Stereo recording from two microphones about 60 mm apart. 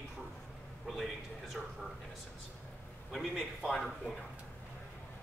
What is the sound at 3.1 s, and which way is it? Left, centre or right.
Speech, centre.